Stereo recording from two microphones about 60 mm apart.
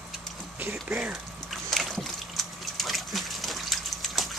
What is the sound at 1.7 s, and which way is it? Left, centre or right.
Water, centre.